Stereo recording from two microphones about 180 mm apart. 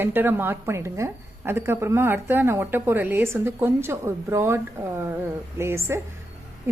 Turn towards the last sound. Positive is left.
turn(degrees=-15)  # may be behind; listen again after turning